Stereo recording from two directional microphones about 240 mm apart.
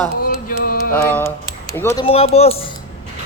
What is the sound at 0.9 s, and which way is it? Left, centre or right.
Speech, centre.